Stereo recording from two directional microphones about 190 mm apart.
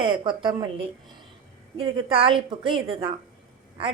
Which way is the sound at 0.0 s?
25° right (ahead or behind).